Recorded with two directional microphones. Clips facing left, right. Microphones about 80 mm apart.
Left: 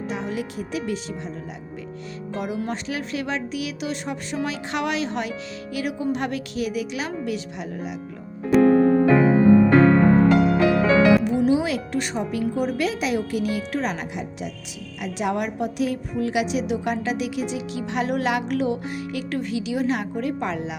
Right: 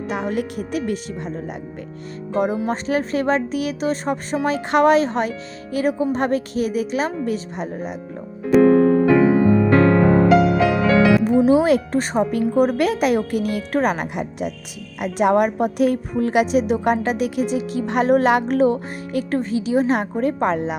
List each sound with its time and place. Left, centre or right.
0.1 s a woman's voice: right
2.6 s speech: right
8.5 s music: centre
11.4 s a woman's voice: right